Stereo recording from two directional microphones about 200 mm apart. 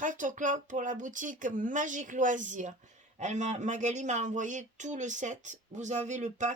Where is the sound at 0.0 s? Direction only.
40° right (ahead or behind).